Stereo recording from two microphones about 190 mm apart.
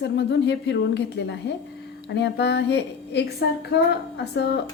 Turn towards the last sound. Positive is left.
turn(degrees=65)  # may be behind; listen again after turning